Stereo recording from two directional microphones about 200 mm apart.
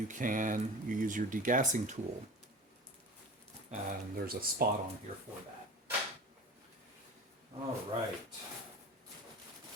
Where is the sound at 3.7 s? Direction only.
35° right (ahead or behind).